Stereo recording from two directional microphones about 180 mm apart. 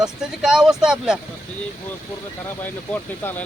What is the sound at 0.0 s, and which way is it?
Speech, 5° right (ahead or behind).